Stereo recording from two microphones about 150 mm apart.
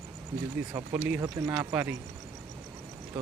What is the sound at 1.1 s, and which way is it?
Speech, 25° right (ahead or behind).